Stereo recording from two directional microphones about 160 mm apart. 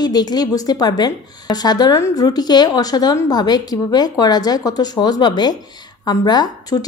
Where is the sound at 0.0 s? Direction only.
25° left (ahead or behind).